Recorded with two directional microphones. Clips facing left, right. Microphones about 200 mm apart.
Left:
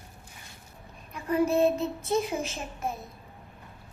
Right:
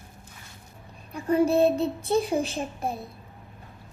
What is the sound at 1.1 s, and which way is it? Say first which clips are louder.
Speech: right 3 dB; 30° right (ahead or behind).